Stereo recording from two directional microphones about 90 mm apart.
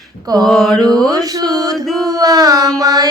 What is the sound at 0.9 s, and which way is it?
Mantra, 45° right (ahead or behind).